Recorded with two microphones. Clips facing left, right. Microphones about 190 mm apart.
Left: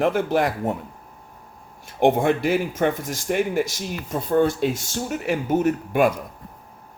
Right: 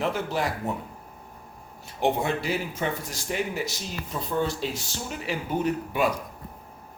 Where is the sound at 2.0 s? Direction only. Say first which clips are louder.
Left 7 dB; 50° left (ahead or behind).